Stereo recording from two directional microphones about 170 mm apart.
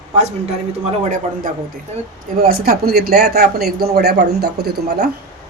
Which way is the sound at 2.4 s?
60° right (ahead or behind).